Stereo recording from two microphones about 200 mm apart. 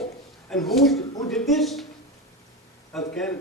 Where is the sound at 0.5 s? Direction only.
Centre (ahead or behind).